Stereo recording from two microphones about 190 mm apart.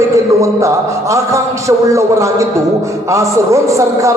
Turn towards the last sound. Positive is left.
turn(degrees=-15)  # may be behind; listen again after turning